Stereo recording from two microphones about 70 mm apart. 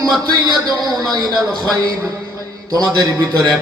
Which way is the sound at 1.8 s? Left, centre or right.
Right.